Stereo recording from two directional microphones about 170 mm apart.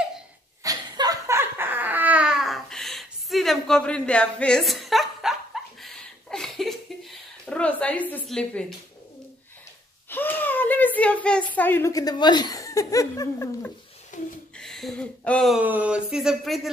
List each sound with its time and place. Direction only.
0.7 s laughter: 20° right (ahead or behind); by 8.7 s 5° left (ahead or behind)
10.0 s whimper: 10° left (ahead or behind)
11.5 s speech: 10° left (ahead or behind)
14.1 s a sound: 50° left (ahead or behind)
14.6 s speech: centre (ahead or behind)
15.6 s speech: 10° right (ahead or behind)